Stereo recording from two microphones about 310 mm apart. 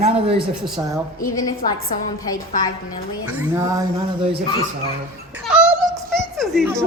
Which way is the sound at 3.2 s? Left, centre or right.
Centre.